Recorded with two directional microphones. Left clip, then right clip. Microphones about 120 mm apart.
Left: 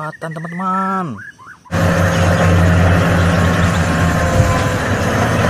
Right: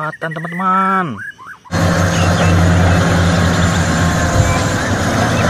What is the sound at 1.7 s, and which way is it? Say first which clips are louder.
Vehicle: even; 30° left (ahead or behind).